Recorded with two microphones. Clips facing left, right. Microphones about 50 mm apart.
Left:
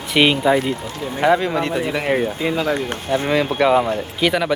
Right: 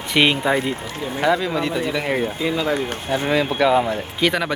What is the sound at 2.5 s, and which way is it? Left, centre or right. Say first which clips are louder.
Speech: left 1 dB; left.